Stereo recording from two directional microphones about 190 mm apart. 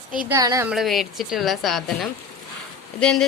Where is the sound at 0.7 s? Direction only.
Centre (ahead or behind).